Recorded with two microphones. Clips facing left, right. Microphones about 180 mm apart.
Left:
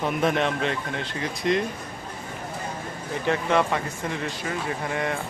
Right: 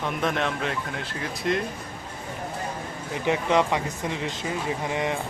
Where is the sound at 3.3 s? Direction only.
15° right (ahead or behind).